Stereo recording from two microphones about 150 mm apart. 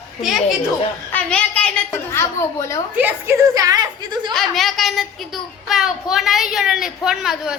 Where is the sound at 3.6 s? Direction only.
25° right (ahead or behind).